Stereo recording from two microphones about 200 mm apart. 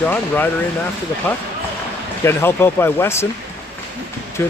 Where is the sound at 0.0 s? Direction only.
10° left (ahead or behind).